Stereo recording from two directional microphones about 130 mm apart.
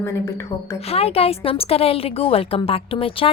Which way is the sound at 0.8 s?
50° left (ahead or behind).